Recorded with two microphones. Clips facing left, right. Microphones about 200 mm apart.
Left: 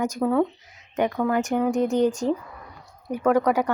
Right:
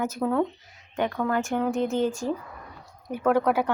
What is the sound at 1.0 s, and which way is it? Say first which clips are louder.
Speech: left 3 dB; 20° left (ahead or behind).